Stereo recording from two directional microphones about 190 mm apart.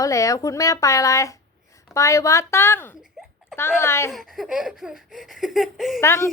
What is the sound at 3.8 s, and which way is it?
Speech, 15° left (ahead or behind).